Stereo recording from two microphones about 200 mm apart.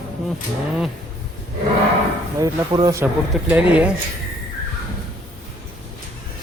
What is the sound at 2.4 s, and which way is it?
Speech, 20° right (ahead or behind).